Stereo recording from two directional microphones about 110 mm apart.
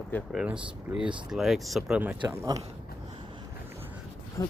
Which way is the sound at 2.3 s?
25° right (ahead or behind).